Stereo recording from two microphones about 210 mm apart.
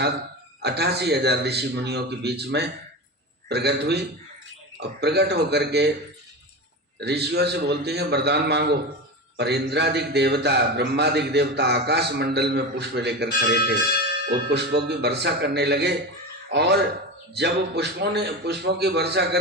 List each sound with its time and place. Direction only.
0.6 s a man's voice: 50° right (ahead or behind)
7.0 s a man's voice: 50° right (ahead or behind)